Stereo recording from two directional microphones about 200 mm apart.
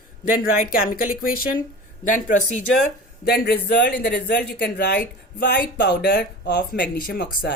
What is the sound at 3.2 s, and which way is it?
Speech, 50° left (ahead or behind).